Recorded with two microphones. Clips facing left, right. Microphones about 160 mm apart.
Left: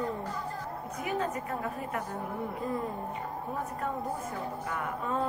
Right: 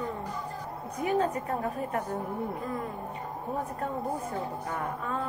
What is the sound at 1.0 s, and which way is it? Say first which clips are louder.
A woman's voice: right 5 dB; 35° right (ahead or behind).